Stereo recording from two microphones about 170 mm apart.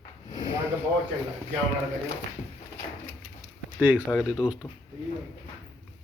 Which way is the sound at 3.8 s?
10° right (ahead or behind).